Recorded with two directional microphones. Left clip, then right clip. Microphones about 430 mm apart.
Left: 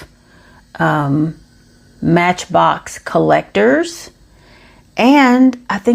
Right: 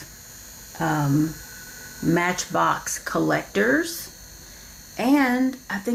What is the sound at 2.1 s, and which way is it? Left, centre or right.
Speech, left.